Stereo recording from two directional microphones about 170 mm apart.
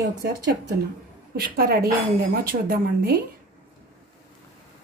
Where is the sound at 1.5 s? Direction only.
60° right (ahead or behind).